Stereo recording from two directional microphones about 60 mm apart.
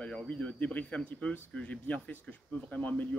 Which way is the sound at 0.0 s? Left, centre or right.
Left.